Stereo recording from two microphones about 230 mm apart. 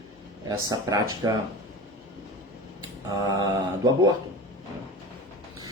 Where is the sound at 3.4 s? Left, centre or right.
Centre.